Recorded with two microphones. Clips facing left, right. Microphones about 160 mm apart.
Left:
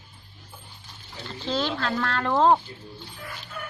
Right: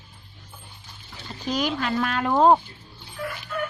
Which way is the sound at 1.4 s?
15° right (ahead or behind).